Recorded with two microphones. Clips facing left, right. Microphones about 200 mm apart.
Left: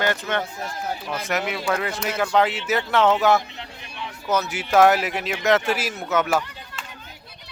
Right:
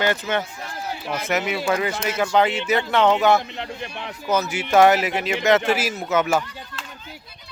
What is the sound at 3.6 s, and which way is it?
Speech, 60° right (ahead or behind).